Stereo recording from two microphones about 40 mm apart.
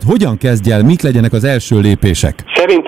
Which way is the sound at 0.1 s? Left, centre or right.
Centre.